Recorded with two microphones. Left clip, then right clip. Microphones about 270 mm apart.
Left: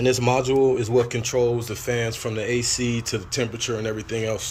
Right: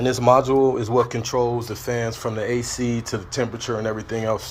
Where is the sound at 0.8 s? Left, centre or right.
Centre.